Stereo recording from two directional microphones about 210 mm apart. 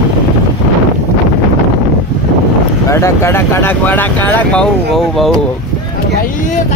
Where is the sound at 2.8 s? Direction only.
15° left (ahead or behind).